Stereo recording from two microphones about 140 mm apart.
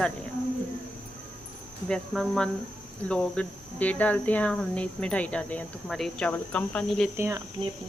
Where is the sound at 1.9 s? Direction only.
Centre (ahead or behind).